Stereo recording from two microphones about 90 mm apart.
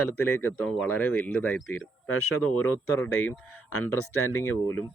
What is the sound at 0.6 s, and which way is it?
Speech, 10° left (ahead or behind).